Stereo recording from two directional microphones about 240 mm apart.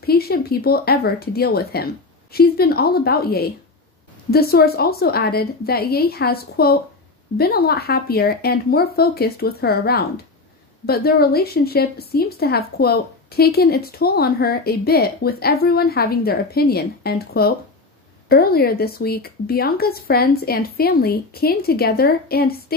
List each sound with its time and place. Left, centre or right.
0.0 s a woman's voice: left